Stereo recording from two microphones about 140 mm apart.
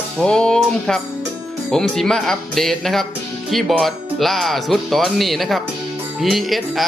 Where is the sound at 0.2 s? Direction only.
5° left (ahead or behind).